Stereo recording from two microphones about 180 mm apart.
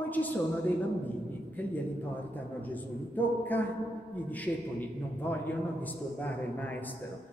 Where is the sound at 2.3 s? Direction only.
10° left (ahead or behind).